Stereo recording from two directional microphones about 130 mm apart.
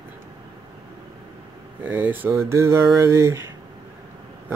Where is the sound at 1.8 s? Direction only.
15° right (ahead or behind).